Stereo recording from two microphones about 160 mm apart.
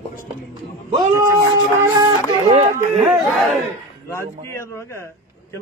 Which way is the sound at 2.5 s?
40° right (ahead or behind).